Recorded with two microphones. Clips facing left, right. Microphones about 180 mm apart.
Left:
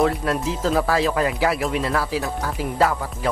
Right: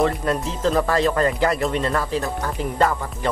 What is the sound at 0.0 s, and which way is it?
Speech, centre (ahead or behind).